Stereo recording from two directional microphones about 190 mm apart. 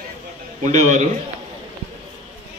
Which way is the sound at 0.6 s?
40° right (ahead or behind).